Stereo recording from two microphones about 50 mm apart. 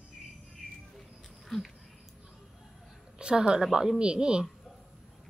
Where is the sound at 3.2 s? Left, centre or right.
Centre.